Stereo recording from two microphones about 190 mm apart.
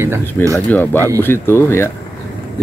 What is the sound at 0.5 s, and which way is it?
Speech, 10° left (ahead or behind).